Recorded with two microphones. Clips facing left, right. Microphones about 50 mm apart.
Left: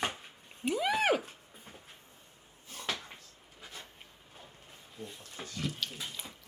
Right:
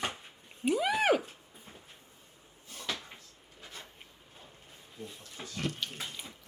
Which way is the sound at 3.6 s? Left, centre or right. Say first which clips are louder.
Even; centre.